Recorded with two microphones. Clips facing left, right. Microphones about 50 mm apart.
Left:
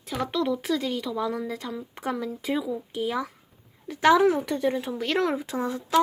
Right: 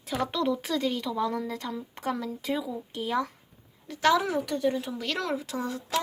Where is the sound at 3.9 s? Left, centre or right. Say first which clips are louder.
Left 5 dB; left.